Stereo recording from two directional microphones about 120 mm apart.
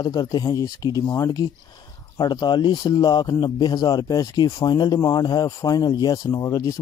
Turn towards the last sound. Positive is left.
turn(degrees=30)  # may be behind; listen again after turning